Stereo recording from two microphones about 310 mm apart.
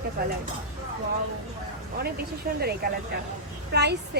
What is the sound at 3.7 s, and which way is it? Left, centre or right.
Speech, right.